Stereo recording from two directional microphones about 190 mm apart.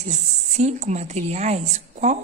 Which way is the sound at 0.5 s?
35° right (ahead or behind).